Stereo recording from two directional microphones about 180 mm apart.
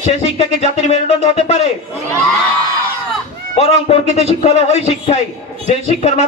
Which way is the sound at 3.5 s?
35° left (ahead or behind).